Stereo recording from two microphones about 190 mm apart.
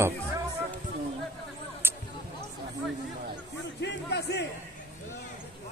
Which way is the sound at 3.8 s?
60° left (ahead or behind).